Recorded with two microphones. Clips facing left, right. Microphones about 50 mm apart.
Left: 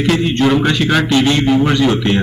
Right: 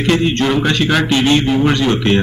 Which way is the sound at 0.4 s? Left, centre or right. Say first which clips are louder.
Left 2 dB; centre.